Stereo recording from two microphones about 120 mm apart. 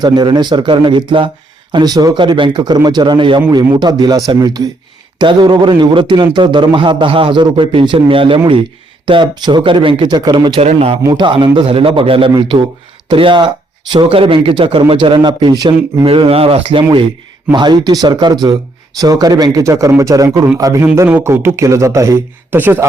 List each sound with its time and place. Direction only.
0.0 s a man's voice: 35° right (ahead or behind)
10.6 s speech: 55° right (ahead or behind)
11.1 s speech: 40° right (ahead or behind)
16.0 s a man's voice: 50° right (ahead or behind); by 22.9 s 15° right (ahead or behind)